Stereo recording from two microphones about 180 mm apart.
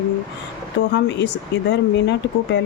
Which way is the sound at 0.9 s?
75° left (ahead or behind).